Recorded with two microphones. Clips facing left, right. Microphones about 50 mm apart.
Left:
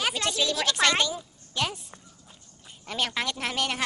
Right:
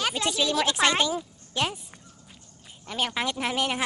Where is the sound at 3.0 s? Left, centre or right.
Centre.